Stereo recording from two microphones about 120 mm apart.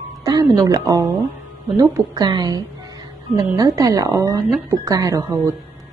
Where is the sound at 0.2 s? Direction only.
30° right (ahead or behind).